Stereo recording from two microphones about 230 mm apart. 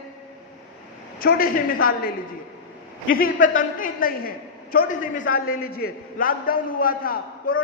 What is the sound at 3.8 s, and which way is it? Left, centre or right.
A woman's voice, left.